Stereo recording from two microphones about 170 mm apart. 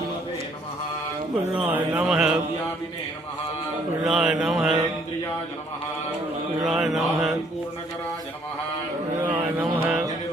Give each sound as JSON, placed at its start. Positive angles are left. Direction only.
{"t": 1.5, "sound": "speech", "side_deg": -5}
{"t": 2.0, "sound": "mantra", "side_deg": -5}
{"t": 4.0, "sound": "mantra", "side_deg": -5}
{"t": 6.7, "sound": "mantra", "side_deg": 0}
{"t": 9.2, "sound": "music", "side_deg": -10}